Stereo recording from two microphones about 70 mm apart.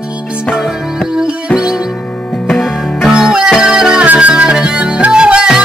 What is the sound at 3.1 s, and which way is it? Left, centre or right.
Music, centre.